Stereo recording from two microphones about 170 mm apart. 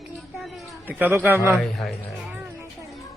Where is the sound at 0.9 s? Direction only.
10° right (ahead or behind).